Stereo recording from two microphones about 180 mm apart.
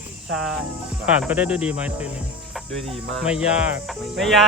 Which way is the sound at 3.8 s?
Centre (ahead or behind).